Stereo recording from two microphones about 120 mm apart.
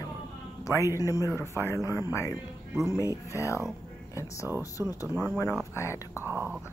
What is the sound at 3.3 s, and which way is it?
Speech, 25° left (ahead or behind).